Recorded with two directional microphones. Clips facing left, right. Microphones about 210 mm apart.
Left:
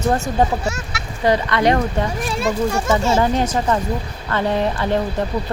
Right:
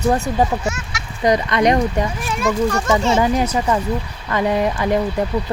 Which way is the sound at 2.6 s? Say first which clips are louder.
Even; 5° left (ahead or behind).